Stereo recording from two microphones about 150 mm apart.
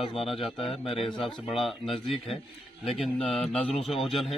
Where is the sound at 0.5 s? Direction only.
40° left (ahead or behind).